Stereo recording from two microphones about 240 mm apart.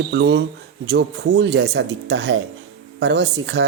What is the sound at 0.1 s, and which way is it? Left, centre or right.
Speech, right.